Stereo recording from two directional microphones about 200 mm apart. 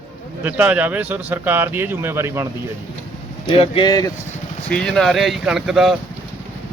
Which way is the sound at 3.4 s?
25° left (ahead or behind).